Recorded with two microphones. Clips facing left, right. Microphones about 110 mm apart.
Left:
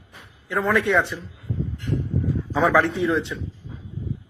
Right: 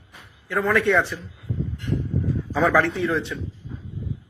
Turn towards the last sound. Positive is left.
turn(degrees=20)  # may be behind; listen again after turning